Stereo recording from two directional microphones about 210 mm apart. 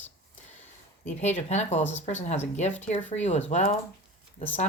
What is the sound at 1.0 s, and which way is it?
Speech, 30° left (ahead or behind).